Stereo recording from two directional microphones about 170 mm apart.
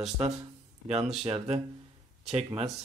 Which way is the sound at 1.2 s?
35° right (ahead or behind).